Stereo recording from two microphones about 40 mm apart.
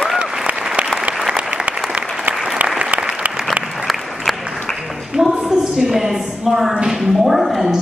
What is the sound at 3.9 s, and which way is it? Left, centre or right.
Applause, centre.